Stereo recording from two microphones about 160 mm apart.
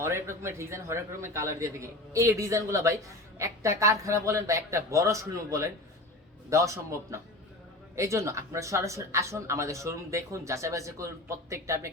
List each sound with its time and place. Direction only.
0.0 s a man's voice: 15° right (ahead or behind)